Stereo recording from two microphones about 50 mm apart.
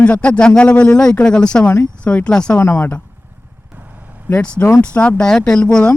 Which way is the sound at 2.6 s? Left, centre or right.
Left.